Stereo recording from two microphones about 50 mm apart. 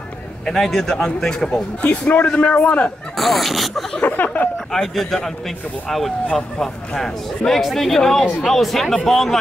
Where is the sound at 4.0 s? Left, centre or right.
Left.